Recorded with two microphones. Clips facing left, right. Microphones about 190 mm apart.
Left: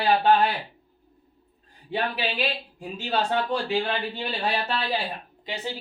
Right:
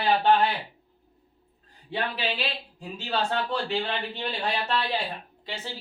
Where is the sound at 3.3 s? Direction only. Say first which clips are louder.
Left 3 dB; 15° left (ahead or behind).